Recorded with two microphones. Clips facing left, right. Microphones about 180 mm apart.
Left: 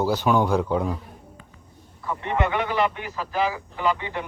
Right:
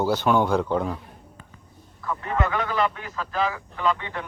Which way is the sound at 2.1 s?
20° left (ahead or behind).